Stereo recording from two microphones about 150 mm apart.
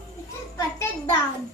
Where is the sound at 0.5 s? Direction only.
20° left (ahead or behind).